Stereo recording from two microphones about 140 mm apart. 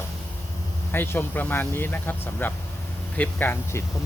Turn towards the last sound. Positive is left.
turn(degrees=15)  # may be behind; listen again after turning